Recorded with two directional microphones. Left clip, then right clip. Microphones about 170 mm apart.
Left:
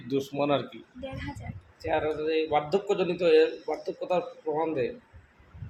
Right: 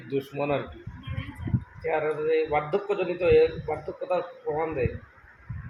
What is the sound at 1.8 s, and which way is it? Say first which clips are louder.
Speech: right 2 dB; 20° left (ahead or behind).